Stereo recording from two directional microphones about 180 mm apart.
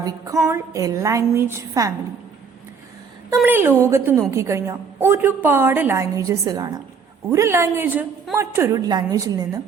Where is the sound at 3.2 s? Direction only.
10° right (ahead or behind).